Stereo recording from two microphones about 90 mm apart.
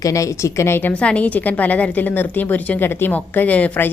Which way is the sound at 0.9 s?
15° left (ahead or behind).